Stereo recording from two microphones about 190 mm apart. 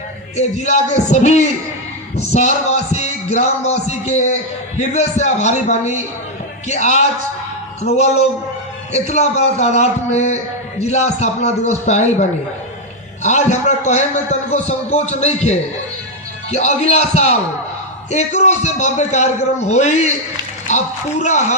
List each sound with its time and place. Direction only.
0.3 s a man's voice: 35° left (ahead or behind)